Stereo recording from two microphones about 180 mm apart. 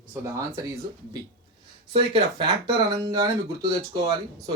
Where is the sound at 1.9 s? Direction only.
25° right (ahead or behind).